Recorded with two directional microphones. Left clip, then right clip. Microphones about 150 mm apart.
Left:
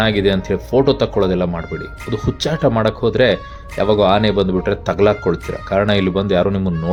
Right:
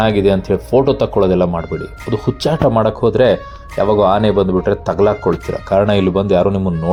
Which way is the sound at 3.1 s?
30° left (ahead or behind).